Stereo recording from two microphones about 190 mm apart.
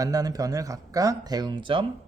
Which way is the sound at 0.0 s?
20° right (ahead or behind).